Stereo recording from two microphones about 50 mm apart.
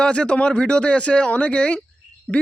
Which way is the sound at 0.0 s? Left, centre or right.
Left.